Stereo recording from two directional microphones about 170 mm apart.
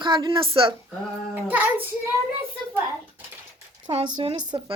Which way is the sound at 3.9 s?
30° right (ahead or behind).